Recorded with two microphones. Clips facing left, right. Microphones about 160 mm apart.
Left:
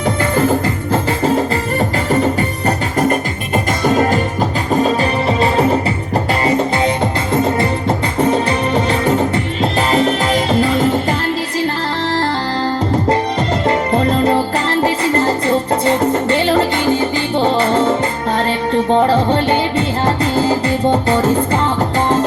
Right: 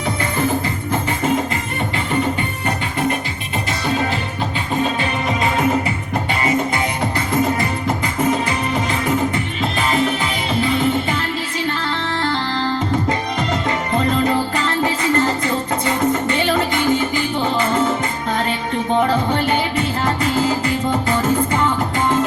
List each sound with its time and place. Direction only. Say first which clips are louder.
2.6 s music: left 5 dB; 45° left (ahead or behind)
13.1 s music: left 5 dB; 30° left (ahead or behind)
18.9 s music: left 2 dB; 30° left (ahead or behind)